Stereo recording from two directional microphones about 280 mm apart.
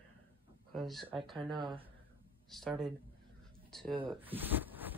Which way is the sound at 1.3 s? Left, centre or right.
Centre.